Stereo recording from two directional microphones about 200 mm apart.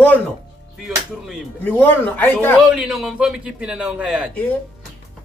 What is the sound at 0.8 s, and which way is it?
Music, centre (ahead or behind).